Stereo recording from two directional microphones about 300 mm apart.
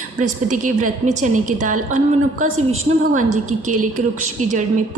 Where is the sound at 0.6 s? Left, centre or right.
Right.